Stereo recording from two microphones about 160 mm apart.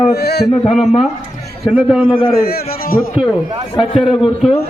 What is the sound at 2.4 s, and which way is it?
Speech, 70° left (ahead or behind).